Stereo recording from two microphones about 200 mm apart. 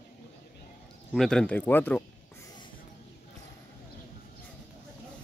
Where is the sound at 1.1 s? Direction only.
Centre (ahead or behind).